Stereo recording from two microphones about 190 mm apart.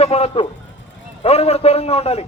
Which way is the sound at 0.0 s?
30° left (ahead or behind).